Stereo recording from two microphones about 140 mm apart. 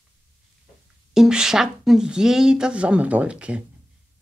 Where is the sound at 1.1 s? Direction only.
5° right (ahead or behind).